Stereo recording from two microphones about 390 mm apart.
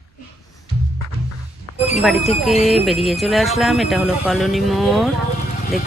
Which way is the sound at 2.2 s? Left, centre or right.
Centre.